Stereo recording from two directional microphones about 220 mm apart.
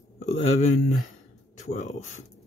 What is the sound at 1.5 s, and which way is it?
Speech, 30° left (ahead or behind).